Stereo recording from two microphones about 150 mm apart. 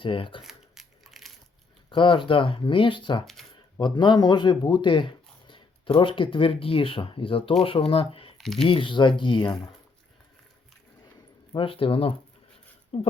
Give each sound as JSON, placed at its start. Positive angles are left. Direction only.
{"t": 0.0, "sound": "speech", "side_deg": 35}
{"t": 0.4, "sound": "a sound", "side_deg": 0}
{"t": 1.9, "sound": "speech", "side_deg": 35}
{"t": 8.4, "sound": "speech", "side_deg": 5}
{"t": 8.6, "sound": "speech", "side_deg": 35}
{"t": 11.5, "sound": "speech", "side_deg": 40}